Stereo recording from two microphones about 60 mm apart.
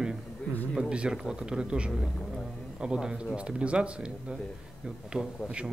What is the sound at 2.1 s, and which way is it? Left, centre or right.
Speech, centre.